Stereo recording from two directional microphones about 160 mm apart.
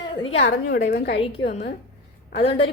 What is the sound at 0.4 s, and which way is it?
Speech, 90° left.